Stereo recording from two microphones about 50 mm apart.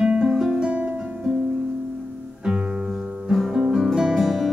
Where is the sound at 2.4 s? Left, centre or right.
Centre.